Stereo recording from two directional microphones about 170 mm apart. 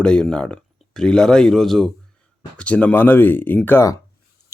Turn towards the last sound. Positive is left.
turn(degrees=15)  # may be behind; listen again after turning